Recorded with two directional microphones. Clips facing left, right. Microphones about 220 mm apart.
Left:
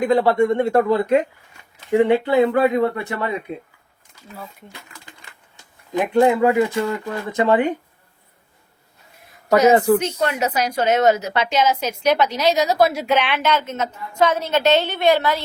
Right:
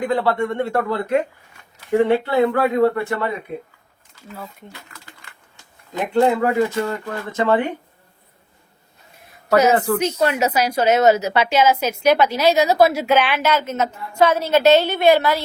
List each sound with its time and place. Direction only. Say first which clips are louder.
0.1 s speech: left 6 dB; 15° left (ahead or behind)
5.9 s speech: left 1 dB; 15° left (ahead or behind)
9.6 s speech: left 4 dB; 10° left (ahead or behind)
10.0 s a woman's voice: right 3 dB; 10° right (ahead or behind)